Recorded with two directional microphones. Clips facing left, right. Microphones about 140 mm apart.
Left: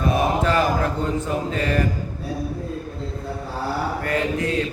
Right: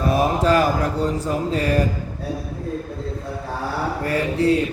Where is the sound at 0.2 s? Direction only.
35° right (ahead or behind).